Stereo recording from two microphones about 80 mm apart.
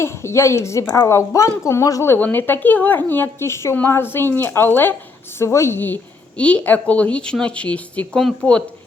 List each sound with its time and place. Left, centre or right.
0.0 s a woman's voice: left
2.1 s speech: left
5.4 s a woman's voice: left; by 8.6 s centre